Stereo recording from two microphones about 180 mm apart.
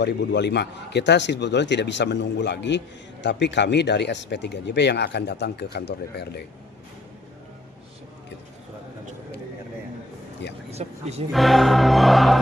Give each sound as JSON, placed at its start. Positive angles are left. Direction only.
{"t": 0.0, "sound": "speech", "side_deg": 70}
{"t": 10.7, "sound": "speech", "side_deg": -35}
{"t": 11.3, "sound": "music", "side_deg": 0}